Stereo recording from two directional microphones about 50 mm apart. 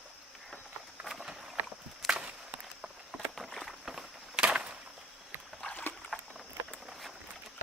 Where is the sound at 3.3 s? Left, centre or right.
Centre.